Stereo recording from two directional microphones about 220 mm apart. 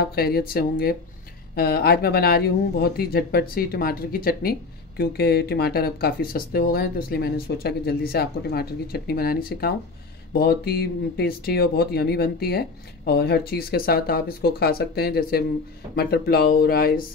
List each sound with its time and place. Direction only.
0.0 s speech: 45° left (ahead or behind)